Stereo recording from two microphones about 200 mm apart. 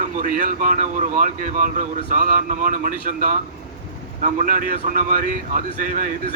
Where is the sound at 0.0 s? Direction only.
40° right (ahead or behind).